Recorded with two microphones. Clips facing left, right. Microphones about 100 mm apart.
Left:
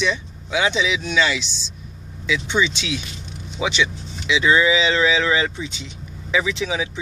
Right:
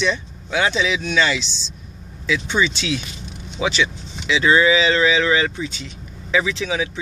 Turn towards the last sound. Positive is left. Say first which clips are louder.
# right 1 dB
turn(degrees=20)  # may be behind; listen again after turning